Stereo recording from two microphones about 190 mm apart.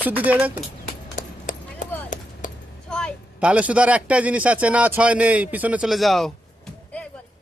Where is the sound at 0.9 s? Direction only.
45° left (ahead or behind).